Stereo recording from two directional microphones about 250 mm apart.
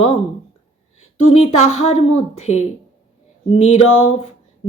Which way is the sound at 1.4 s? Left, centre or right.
Left.